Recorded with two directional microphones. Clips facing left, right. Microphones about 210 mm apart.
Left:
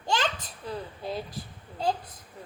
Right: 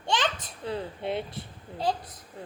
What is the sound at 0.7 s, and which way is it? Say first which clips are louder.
Speech: right 3 dB; 25° right (ahead or behind).